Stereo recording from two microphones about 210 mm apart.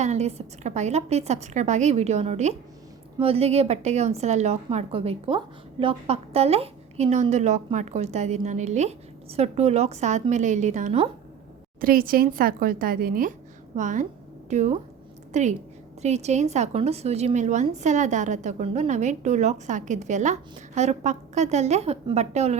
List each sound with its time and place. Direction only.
0.0 s a woman's voice: 30° right (ahead or behind)